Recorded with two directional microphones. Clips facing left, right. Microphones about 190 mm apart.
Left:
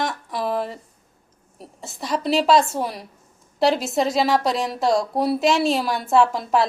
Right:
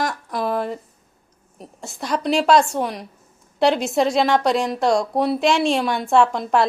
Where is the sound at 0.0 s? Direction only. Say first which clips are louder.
Right 2 dB; centre (ahead or behind).